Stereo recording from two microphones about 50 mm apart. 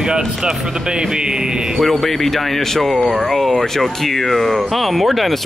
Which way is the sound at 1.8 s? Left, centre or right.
Centre.